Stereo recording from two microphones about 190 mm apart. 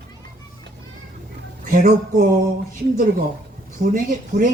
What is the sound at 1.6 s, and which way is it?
Speech, 40° right (ahead or behind).